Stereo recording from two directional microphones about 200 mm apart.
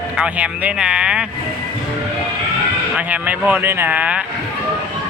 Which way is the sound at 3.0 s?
10° right (ahead or behind).